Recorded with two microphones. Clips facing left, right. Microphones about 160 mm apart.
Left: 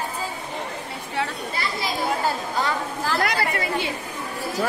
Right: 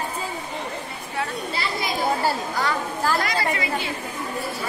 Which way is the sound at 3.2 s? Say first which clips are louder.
Left 1 dB; 60° left (ahead or behind).